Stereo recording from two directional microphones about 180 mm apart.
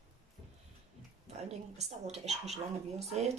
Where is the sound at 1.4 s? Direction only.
35° right (ahead or behind).